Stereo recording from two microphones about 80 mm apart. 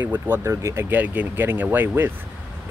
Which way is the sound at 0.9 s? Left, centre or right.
Right.